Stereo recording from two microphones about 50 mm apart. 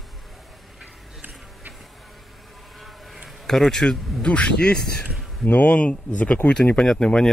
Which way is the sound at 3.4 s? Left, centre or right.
Centre.